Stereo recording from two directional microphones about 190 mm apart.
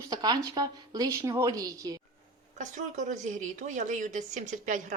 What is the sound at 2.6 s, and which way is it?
A woman's voice, 40° right (ahead or behind).